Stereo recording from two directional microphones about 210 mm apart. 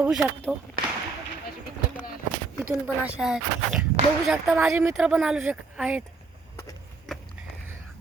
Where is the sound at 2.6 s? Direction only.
5° right (ahead or behind).